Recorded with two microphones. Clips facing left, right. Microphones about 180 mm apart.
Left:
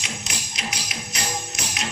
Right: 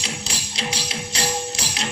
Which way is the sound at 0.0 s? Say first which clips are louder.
Right 3 dB; 30° right (ahead or behind).